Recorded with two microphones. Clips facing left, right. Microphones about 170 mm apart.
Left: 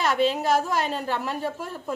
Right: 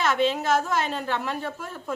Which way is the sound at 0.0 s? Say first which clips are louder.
Left 1 dB; 40° left (ahead or behind).